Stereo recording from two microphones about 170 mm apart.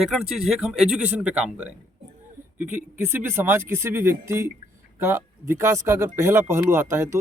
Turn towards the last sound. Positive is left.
turn(degrees=-15)  # may be behind; listen again after turning